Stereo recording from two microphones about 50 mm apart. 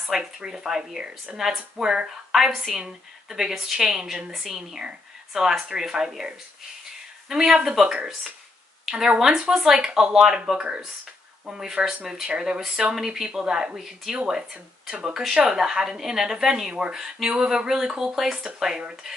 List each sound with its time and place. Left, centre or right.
0.1 s a woman's voice: centre
2.3 s a woman's voice: centre
2.7 s a woman's voice: centre